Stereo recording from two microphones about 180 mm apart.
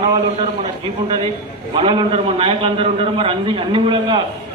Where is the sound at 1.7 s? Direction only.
30° right (ahead or behind).